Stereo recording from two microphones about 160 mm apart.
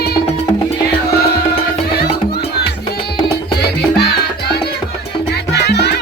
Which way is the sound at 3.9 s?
90° left.